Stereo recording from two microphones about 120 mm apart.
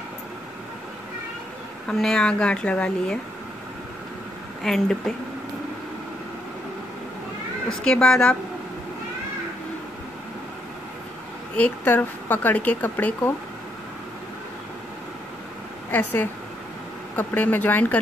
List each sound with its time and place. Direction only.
1.9 s speech: 5° left (ahead or behind)
4.6 s speech: centre (ahead or behind)
7.8 s speech: 5° left (ahead or behind)
11.5 s speech: 15° left (ahead or behind)
15.9 s speech: 15° left (ahead or behind)